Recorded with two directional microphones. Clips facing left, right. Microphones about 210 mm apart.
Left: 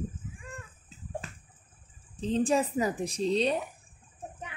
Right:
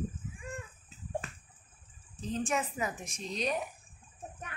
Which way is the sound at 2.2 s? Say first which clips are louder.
Left 7 dB; 30° left (ahead or behind).